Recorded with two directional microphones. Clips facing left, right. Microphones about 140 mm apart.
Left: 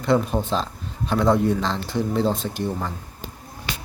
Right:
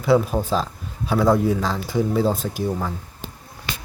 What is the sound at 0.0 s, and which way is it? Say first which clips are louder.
A man's voice: right 2 dB; 5° right (ahead or behind).